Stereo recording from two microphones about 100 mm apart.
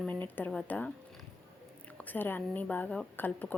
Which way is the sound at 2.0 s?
20° left (ahead or behind).